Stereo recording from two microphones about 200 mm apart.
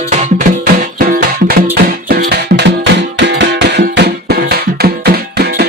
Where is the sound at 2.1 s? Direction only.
50° right (ahead or behind).